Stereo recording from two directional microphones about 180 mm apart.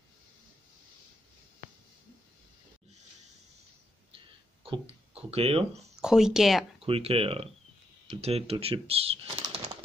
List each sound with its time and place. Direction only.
4.6 s speech: 35° right (ahead or behind)
5.9 s speech: 5° right (ahead or behind)
6.8 s speech: 30° right (ahead or behind)